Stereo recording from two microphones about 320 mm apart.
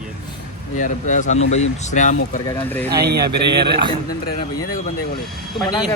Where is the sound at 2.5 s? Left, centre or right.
Centre.